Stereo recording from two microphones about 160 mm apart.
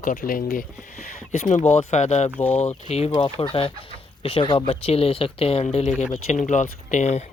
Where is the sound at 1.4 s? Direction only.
45° left (ahead or behind).